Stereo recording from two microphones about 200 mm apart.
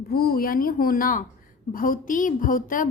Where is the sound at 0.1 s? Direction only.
50° left (ahead or behind).